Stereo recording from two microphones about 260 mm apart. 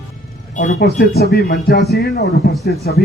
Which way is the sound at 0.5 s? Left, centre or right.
Left.